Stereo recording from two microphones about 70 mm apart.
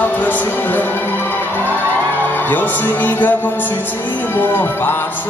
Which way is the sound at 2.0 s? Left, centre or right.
Left.